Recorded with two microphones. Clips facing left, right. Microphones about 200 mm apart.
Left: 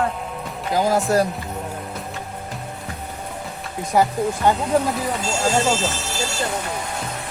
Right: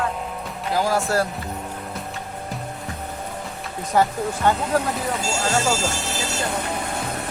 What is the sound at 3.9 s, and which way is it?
Speech, 10° left (ahead or behind).